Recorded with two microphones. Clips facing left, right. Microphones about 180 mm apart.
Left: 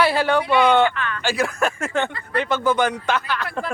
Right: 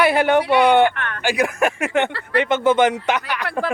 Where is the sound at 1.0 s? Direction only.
65° right (ahead or behind).